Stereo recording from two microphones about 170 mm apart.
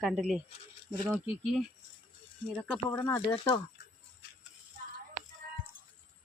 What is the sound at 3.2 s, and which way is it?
Speech, 30° left (ahead or behind).